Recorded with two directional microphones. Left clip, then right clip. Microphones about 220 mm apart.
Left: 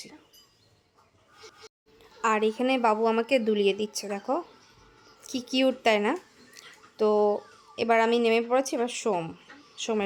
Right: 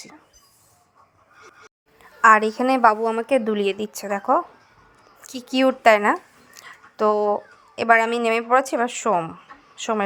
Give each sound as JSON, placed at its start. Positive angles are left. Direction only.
{"t": 2.0, "sound": "a woman's voice", "side_deg": -15}